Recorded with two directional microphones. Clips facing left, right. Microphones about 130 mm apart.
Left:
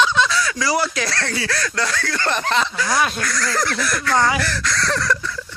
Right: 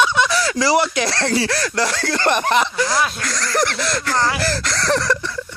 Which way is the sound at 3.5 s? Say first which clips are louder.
Right 5 dB; 25° right (ahead or behind).